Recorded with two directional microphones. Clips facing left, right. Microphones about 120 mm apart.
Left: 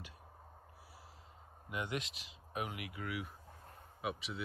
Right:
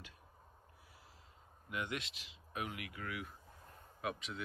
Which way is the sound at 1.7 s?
25° left (ahead or behind).